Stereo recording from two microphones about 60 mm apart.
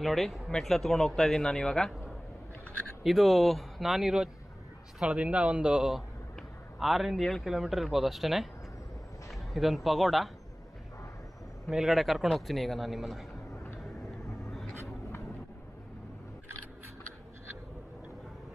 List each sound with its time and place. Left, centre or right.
0.0 s a man's voice: centre
3.0 s a man's voice: centre
5.0 s a man's voice: right; by 10.3 s centre
11.7 s a man's voice: centre
14.4 s vehicle: centre